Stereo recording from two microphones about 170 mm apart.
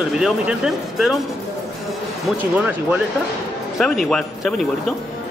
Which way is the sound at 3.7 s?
Centre (ahead or behind).